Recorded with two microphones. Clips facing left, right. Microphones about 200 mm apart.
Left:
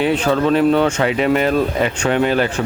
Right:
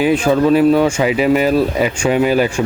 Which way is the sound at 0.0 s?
10° right (ahead or behind).